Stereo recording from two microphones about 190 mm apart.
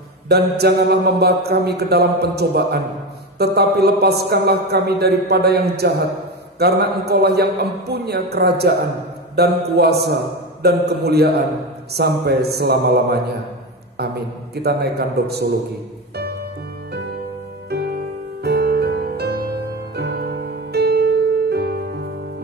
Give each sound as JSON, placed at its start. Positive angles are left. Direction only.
{"t": 0.3, "sound": "a man's voice", "side_deg": -60}
{"t": 17.6, "sound": "music", "side_deg": -55}